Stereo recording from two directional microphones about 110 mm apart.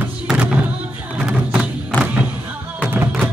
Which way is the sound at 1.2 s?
5° right (ahead or behind).